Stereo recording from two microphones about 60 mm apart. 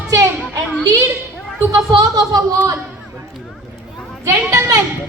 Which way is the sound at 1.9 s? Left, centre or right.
Right.